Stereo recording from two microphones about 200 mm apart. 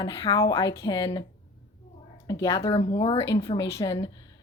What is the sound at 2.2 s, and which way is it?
Speech, 15° left (ahead or behind).